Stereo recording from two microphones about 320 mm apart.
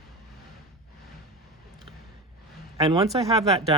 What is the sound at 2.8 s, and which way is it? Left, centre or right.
Speech, centre.